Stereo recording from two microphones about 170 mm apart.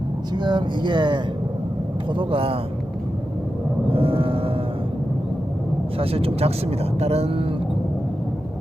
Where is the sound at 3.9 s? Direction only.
35° right (ahead or behind).